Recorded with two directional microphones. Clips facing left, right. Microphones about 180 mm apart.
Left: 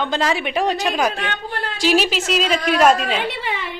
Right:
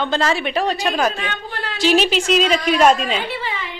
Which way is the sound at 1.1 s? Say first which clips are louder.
Left 1 dB; 50° left (ahead or behind).